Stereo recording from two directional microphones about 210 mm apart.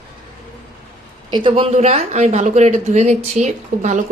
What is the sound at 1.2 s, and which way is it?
Speech, 25° right (ahead or behind).